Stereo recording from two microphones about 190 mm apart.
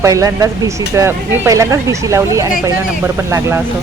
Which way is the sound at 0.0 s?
15° right (ahead or behind).